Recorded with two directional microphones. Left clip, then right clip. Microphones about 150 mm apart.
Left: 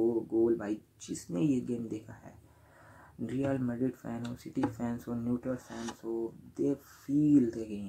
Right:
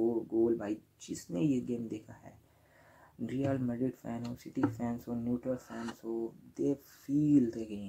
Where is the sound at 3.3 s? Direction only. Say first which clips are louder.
Left 1 dB; 15° right (ahead or behind).